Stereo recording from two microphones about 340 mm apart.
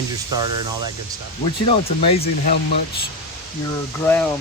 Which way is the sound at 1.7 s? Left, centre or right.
Centre.